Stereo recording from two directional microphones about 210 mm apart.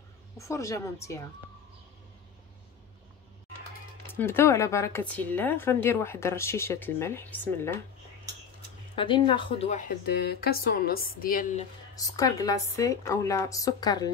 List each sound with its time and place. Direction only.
0.4 s speech: 15° left (ahead or behind)
4.1 s speech: 10° left (ahead or behind)
8.9 s speech: 25° left (ahead or behind)
10.0 s speech: 50° left (ahead or behind)
11.9 s speech: 15° left (ahead or behind)